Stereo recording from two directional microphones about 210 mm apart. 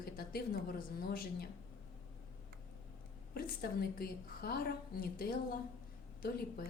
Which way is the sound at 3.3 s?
45° left (ahead or behind).